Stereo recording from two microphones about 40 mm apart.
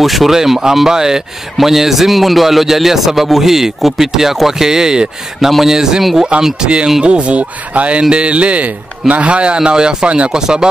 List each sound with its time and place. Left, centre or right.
0.0 s speech: centre
0.4 s a man's voice: centre; by 10.3 s right
10.3 s a man's voice: centre